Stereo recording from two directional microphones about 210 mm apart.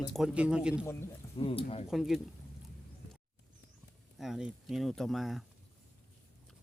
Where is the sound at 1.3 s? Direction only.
25° left (ahead or behind).